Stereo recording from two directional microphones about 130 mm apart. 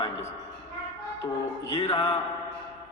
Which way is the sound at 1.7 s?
50° left (ahead or behind).